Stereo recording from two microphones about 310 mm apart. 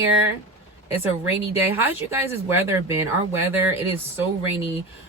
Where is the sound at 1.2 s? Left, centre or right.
Centre.